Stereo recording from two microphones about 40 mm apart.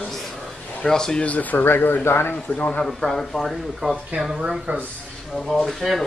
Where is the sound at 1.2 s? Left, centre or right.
Left.